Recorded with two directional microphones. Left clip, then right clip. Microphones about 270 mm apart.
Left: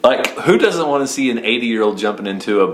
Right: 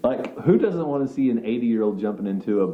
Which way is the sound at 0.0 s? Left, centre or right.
Centre.